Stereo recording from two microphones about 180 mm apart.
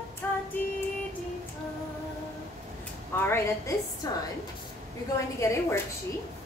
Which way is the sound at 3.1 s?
15° left (ahead or behind).